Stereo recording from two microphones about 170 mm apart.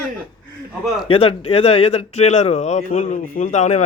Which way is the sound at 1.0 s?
35° left (ahead or behind).